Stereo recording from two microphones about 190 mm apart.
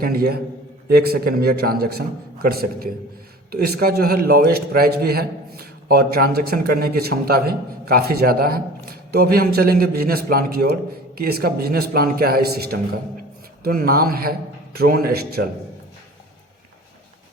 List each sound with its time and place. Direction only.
0.0 s a man's voice: 50° right (ahead or behind)